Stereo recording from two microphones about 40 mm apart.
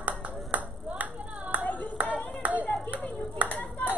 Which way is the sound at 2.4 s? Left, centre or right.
Right.